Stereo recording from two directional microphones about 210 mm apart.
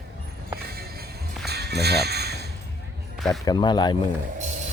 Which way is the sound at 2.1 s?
50° right (ahead or behind).